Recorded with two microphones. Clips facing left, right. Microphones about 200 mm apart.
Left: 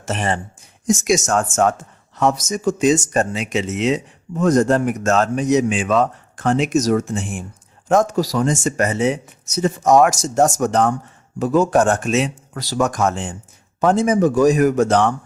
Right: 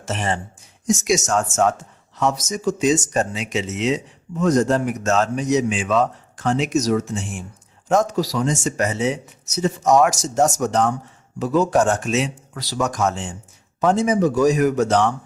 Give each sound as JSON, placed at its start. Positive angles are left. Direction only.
{"t": 0.0, "sound": "speech", "side_deg": 55}